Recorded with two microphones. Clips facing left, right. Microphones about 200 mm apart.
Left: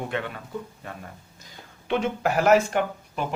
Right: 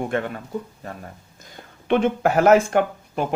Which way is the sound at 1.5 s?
55° right (ahead or behind).